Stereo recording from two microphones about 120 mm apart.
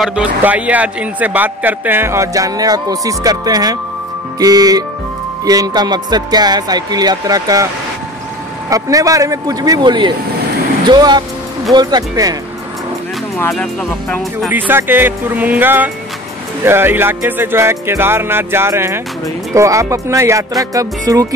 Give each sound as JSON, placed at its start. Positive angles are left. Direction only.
{"t": 0.0, "sound": "speech", "side_deg": -10}
{"t": 8.6, "sound": "speech", "side_deg": -30}
{"t": 14.5, "sound": "speech", "side_deg": -15}